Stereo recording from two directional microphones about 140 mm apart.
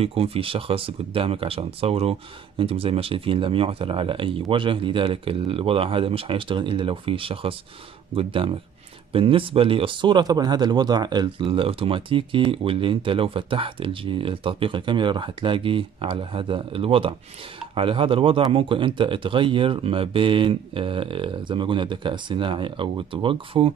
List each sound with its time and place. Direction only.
0.0 s speech: 45° right (ahead or behind)